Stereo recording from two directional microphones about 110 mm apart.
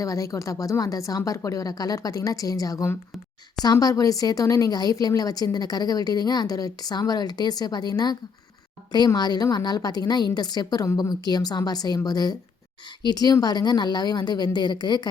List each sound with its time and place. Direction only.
0.0 s speech: 30° left (ahead or behind)